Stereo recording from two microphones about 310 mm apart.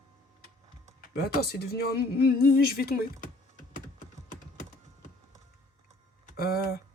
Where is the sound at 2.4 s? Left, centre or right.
Left.